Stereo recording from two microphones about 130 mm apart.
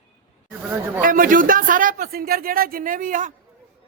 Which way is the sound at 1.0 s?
90° right.